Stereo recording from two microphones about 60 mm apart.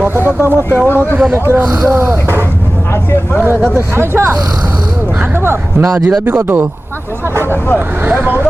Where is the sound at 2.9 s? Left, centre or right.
Left.